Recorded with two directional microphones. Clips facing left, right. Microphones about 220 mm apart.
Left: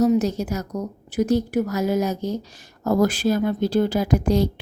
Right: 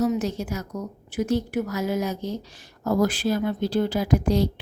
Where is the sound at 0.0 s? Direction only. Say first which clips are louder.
Left 5 dB; 40° left (ahead or behind).